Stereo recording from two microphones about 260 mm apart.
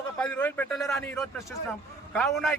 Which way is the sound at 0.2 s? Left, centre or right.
Centre.